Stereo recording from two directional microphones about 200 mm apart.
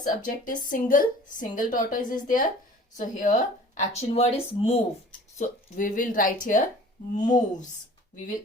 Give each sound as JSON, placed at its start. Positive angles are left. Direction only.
{"t": 0.0, "sound": "a woman's voice", "side_deg": 40}
{"t": 7.2, "sound": "speech", "side_deg": 20}